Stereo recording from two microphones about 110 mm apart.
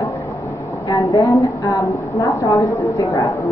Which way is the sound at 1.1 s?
30° left (ahead or behind).